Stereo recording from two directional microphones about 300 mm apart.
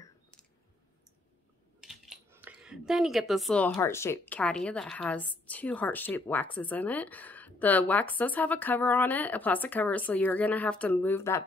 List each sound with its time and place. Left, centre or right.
1.8 s speech: centre